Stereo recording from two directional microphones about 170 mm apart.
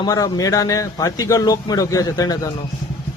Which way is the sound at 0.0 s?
20° left (ahead or behind).